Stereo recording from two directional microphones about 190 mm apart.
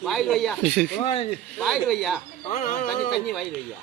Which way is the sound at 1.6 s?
Centre (ahead or behind).